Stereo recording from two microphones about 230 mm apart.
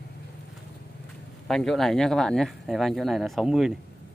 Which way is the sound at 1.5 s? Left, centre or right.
Centre.